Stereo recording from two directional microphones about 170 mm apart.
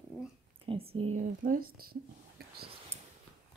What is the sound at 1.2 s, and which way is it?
Speech, 55° right (ahead or behind).